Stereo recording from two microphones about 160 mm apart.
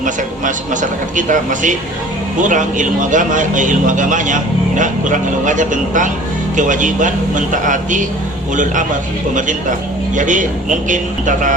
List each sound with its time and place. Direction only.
0.0 s speech: 55° right (ahead or behind)
9.3 s speech: 55° right (ahead or behind)